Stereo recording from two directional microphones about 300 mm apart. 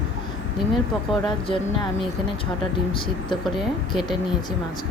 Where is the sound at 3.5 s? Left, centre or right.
Centre.